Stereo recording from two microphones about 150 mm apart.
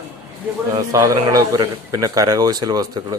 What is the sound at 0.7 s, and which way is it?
A man's voice, 25° right (ahead or behind).